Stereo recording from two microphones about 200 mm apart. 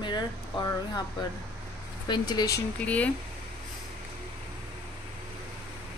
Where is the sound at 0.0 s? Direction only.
20° left (ahead or behind).